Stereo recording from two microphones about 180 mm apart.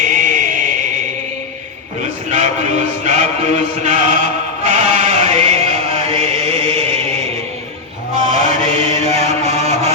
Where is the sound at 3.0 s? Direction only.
40° right (ahead or behind).